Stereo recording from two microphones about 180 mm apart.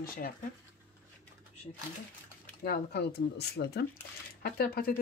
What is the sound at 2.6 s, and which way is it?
Speech, 60° left (ahead or behind).